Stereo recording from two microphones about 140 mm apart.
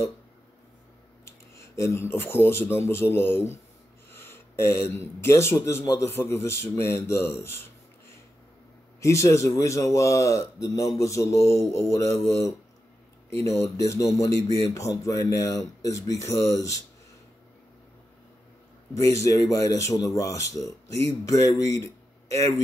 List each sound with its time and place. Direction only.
1.5 s a man's voice: 20° left (ahead or behind)
4.8 s a man's voice: 20° left (ahead or behind)
9.0 s a man's voice: 20° left (ahead or behind)
18.9 s a man's voice: 20° left (ahead or behind)